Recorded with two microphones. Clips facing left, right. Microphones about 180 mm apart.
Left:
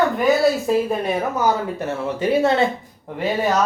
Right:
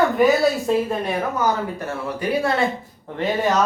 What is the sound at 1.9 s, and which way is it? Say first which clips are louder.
Speech: left 5 dB; 25° left (ahead or behind).